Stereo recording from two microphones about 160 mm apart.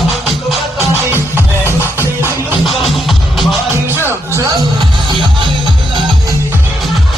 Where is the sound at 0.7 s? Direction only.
15° right (ahead or behind).